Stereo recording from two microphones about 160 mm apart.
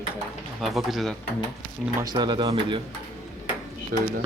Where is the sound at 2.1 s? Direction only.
25° right (ahead or behind).